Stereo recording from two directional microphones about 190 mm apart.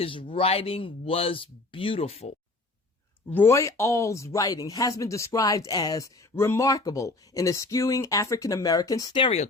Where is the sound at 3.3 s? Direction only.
15° left (ahead or behind).